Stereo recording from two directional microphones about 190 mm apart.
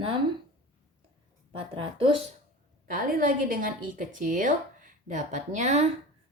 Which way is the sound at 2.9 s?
50° right (ahead or behind).